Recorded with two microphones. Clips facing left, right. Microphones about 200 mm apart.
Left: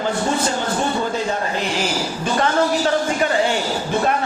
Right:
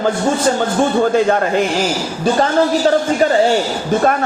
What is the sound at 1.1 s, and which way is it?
Speech, 60° right (ahead or behind).